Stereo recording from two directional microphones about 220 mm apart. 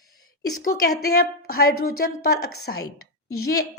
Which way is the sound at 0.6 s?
45° left (ahead or behind).